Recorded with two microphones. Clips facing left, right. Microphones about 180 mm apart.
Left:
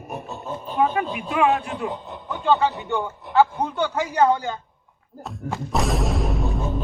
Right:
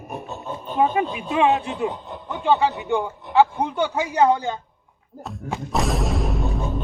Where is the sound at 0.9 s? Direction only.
25° right (ahead or behind).